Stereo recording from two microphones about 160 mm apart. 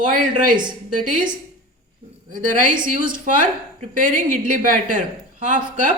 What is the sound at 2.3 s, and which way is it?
A woman's voice, 55° right (ahead or behind).